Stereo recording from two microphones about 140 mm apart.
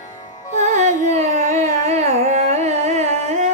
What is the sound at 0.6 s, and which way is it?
Carnatic music, 60° right (ahead or behind).